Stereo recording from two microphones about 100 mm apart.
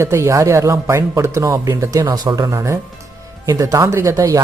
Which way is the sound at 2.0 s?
45° right (ahead or behind).